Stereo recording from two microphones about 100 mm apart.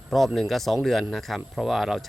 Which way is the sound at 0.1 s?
Centre (ahead or behind).